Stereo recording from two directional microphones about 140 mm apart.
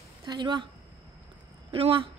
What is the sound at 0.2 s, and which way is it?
Speech, 30° right (ahead or behind).